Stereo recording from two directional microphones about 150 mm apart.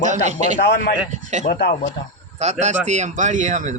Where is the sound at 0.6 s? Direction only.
90° left.